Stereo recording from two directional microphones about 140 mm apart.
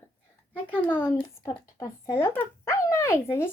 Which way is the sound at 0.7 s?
15° left (ahead or behind).